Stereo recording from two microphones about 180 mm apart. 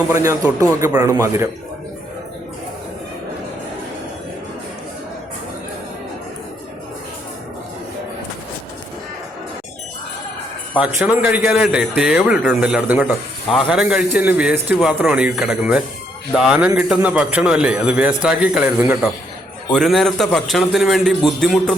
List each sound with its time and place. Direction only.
0.1 s a man's voice: 15° right (ahead or behind)
10.8 s a man's voice: 5° right (ahead or behind)
19.7 s a man's voice: centre (ahead or behind)